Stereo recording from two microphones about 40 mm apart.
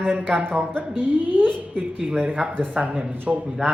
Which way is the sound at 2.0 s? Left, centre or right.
Right.